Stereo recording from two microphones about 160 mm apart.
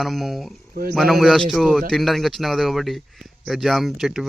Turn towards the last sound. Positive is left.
turn(degrees=0)  # may be behind; listen again after turning